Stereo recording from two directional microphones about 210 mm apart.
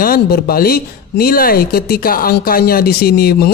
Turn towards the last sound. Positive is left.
turn(degrees=45)  # may be behind; listen again after turning